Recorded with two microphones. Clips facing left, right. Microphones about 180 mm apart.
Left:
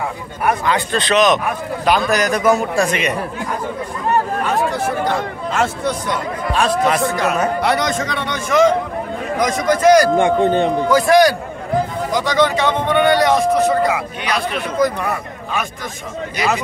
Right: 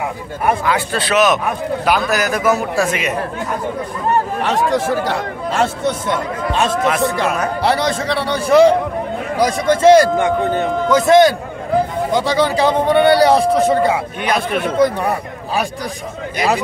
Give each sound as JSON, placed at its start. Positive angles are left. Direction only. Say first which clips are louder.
{"t": 0.7, "sound": "a man's voice", "louder": "even", "side_deg": -10}
{"t": 4.4, "sound": "speech", "louder": "right 2 dB", "side_deg": -90}
{"t": 5.5, "sound": "speech", "louder": "right 2 dB", "side_deg": -30}
{"t": 6.9, "sound": "a man's voice", "louder": "right 1 dB", "side_deg": 0}
{"t": 7.6, "sound": "a man's voice", "louder": "right 1 dB", "side_deg": -30}
{"t": 10.1, "sound": "speech", "louder": "left 2 dB", "side_deg": 25}
{"t": 10.9, "sound": "a man's voice", "louder": "right 3 dB", "side_deg": -20}
{"t": 14.2, "sound": "a man's voice", "louder": "right 5 dB", "side_deg": -50}
{"t": 14.8, "sound": "a man's voice", "louder": "right 2 dB", "side_deg": -30}